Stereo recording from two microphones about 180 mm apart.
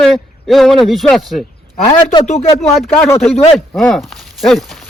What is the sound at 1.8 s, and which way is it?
Speech, 25° left (ahead or behind).